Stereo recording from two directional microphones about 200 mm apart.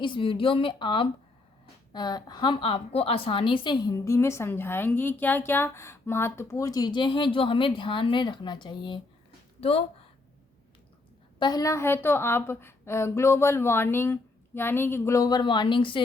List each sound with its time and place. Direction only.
0.0 s a woman's voice: 25° left (ahead or behind)
11.3 s a woman's voice: 20° left (ahead or behind)